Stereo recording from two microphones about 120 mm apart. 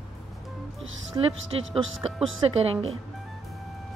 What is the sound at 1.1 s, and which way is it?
Speech, 35° right (ahead or behind).